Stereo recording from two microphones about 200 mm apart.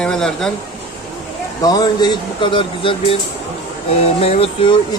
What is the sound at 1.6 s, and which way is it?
Speech, 20° left (ahead or behind).